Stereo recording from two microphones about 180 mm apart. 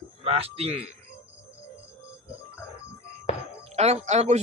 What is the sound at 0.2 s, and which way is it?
Speech, 35° right (ahead or behind).